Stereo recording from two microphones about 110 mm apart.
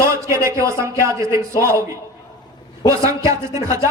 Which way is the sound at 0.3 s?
25° right (ahead or behind).